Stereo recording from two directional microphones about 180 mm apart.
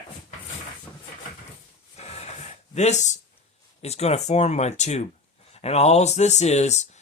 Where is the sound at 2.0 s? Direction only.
35° left (ahead or behind).